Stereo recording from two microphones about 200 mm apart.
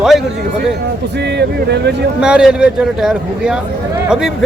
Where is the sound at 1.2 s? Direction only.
55° right (ahead or behind).